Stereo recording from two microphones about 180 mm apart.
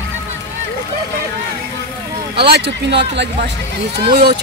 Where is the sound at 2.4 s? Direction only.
65° right (ahead or behind).